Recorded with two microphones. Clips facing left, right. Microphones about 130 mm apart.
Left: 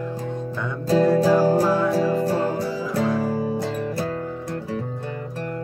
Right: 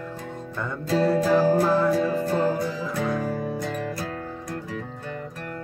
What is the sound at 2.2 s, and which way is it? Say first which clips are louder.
Music: left 1 dB; 35° left (ahead or behind).